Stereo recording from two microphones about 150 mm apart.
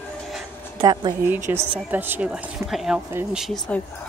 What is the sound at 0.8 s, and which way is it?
Speech, 30° right (ahead or behind).